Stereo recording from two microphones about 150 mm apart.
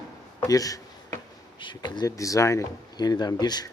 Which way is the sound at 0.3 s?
25° left (ahead or behind).